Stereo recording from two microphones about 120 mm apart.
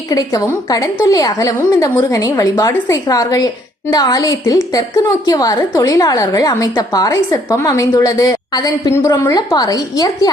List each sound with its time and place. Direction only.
0.1 s a woman's voice: 30° left (ahead or behind)